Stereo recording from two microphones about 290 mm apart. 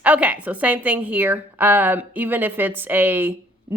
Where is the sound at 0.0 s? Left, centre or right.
Centre.